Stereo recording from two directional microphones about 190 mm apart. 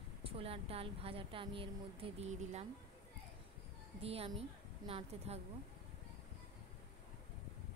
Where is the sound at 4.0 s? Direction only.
30° right (ahead or behind).